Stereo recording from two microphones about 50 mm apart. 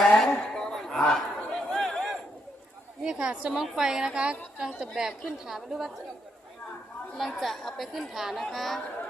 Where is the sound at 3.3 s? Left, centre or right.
Right.